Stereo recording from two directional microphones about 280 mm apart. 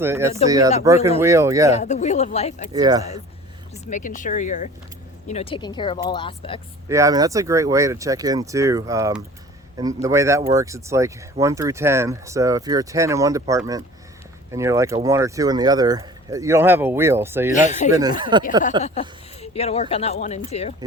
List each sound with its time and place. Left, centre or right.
0.0 s speech: centre
1.7 s speech: left
2.7 s speech: centre
3.8 s speech: left
6.8 s speech: centre
17.5 s speech: left
18.2 s speech: centre
18.8 s speech: left